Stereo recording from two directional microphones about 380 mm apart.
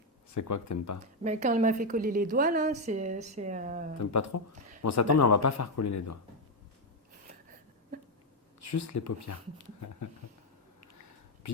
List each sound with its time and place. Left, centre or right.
0.3 s speech: left
1.2 s a woman's voice: centre
4.0 s speech: left
8.6 s speech: left